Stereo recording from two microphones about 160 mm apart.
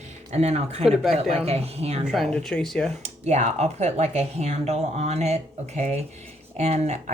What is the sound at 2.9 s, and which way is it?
Speech, 45° right (ahead or behind).